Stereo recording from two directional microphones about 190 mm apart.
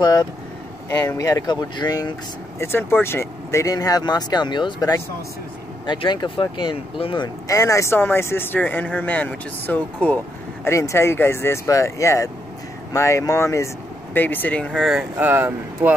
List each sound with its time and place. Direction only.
0.0 s speech: 20° left (ahead or behind); by 15.9 s 10° right (ahead or behind)